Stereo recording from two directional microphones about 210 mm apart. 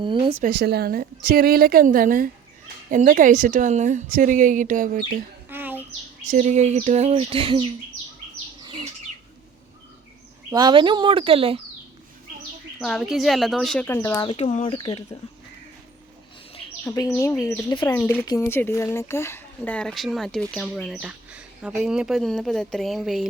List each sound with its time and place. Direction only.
0.0 s speech: 25° right (ahead or behind)
0.4 s a woman's voice: 50° right (ahead or behind)
5.5 s a sound: 10° right (ahead or behind)
6.3 s speech: 35° right (ahead or behind)
8.6 s bird: 25° right (ahead or behind)
10.5 s speech: 20° right (ahead or behind)
12.8 s speech: centre (ahead or behind); by 14.3 s 15° left (ahead or behind)
14.3 s speech: 25° left (ahead or behind)
16.8 s speech: 10° left (ahead or behind)